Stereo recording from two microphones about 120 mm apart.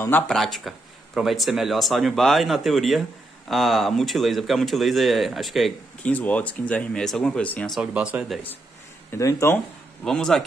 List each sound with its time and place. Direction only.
0.3 s speech: centre (ahead or behind)
6.0 s speech: 10° left (ahead or behind)
7.7 s speech: 5° right (ahead or behind)
9.1 s speech: 25° left (ahead or behind)
10.0 s speech: 5° left (ahead or behind)